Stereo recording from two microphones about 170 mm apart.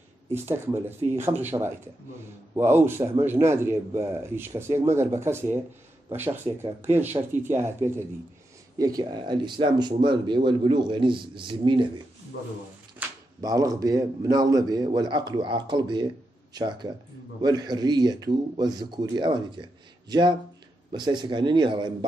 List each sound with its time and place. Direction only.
0.3 s speech: 15° right (ahead or behind)
13.0 s a sound: 10° right (ahead or behind)
13.4 s speech: 20° right (ahead or behind)